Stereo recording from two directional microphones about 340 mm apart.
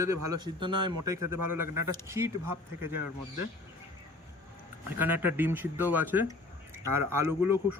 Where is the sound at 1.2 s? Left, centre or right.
Right.